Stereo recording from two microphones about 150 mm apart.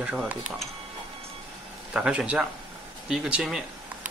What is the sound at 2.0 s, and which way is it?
Speech, 5° right (ahead or behind).